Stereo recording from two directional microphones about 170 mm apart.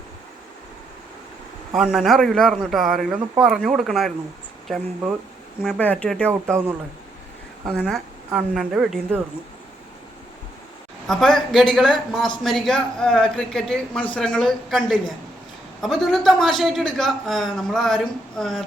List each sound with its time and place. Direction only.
1.7 s speech: centre (ahead or behind)
7.8 s speech: centre (ahead or behind)
11.0 s speech: centre (ahead or behind)